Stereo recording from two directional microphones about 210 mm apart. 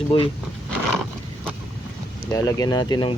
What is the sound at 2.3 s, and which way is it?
Speech, 15° left (ahead or behind).